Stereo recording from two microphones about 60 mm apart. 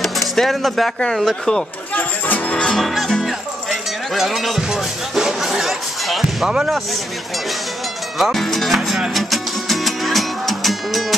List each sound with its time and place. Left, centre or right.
0.0 s music: centre
2.0 s music: left
2.5 s music: centre
2.8 s speech: centre
4.1 s music: centre
6.4 s speech: centre
8.2 s music: centre